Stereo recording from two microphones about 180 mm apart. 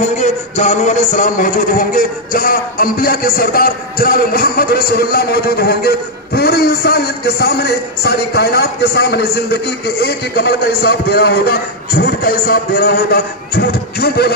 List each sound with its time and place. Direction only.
0.2 s speech: 40° left (ahead or behind); by 14.3 s 60° left (ahead or behind)